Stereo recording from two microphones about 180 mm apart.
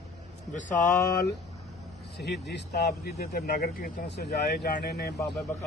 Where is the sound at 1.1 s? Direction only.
60° left (ahead or behind).